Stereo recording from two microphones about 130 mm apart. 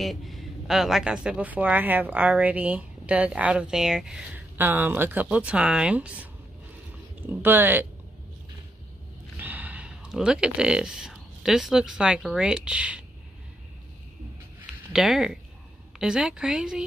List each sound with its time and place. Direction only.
0.0 s speech: centre (ahead or behind)
7.2 s speech: 15° right (ahead or behind)
9.4 s speech: 10° right (ahead or behind)
14.9 s a woman's voice: 5° right (ahead or behind)